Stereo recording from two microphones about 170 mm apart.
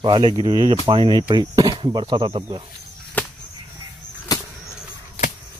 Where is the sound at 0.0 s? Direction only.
30° right (ahead or behind).